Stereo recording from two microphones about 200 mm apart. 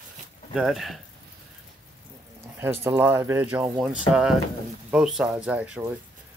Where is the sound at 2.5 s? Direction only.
10° right (ahead or behind).